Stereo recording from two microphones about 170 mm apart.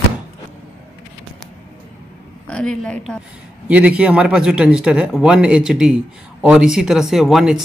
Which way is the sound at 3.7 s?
5° right (ahead or behind).